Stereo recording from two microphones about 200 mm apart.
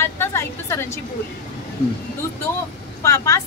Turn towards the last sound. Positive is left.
turn(degrees=15)  # may be behind; listen again after turning